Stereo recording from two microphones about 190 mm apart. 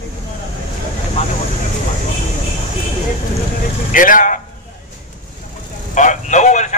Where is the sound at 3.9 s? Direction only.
45° left (ahead or behind).